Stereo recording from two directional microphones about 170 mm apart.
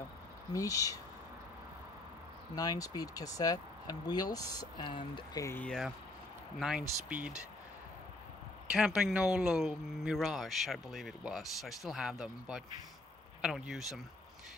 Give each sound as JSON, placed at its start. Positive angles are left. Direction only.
{"t": 0.5, "sound": "speech", "side_deg": 20}
{"t": 2.5, "sound": "speech", "side_deg": 20}
{"t": 5.6, "sound": "speech", "side_deg": 5}
{"t": 7.1, "sound": "speech", "side_deg": -5}
{"t": 8.6, "sound": "speech", "side_deg": -5}